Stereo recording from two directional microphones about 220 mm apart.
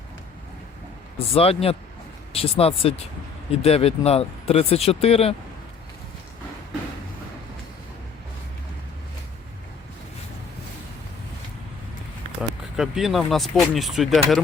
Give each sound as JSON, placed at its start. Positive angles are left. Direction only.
{"t": 1.3, "sound": "speech", "side_deg": 25}
{"t": 12.4, "sound": "speech", "side_deg": 0}